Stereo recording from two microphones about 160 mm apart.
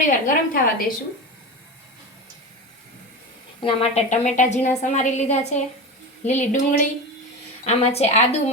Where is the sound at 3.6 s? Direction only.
40° left (ahead or behind).